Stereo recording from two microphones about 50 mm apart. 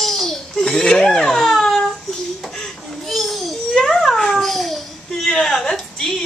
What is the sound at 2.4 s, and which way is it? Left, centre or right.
Babbling, centre.